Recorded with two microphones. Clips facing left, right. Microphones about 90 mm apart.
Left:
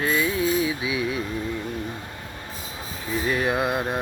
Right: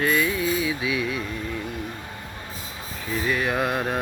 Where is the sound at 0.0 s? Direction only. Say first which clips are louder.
Even; 25° left (ahead or behind).